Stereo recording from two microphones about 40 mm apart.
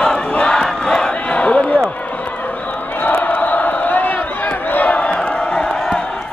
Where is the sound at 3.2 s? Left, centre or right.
Left.